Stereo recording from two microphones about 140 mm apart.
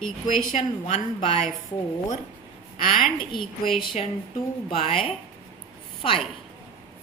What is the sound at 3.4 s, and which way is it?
Speech, centre (ahead or behind).